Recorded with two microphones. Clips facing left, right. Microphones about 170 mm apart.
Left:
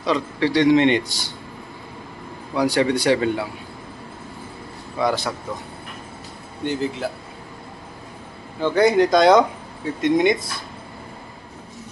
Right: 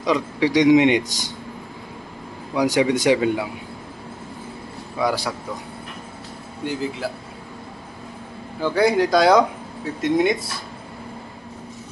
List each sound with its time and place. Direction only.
0.0 s a man's voice: 15° right (ahead or behind)
2.5 s a man's voice: 15° right (ahead or behind)
4.9 s a man's voice: 10° right (ahead or behind)
6.6 s speech: 5° right (ahead or behind)
8.5 s speech: 5° right (ahead or behind)